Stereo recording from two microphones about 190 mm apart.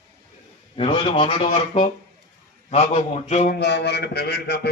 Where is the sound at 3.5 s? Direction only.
60° left (ahead or behind).